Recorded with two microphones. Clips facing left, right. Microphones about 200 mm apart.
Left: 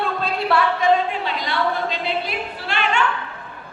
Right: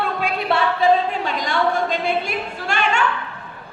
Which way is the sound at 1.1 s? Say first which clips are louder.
Right 2 dB; 45° right (ahead or behind).